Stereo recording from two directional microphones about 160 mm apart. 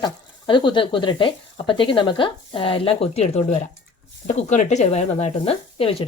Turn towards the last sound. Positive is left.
turn(degrees=35)  # may be behind; listen again after turning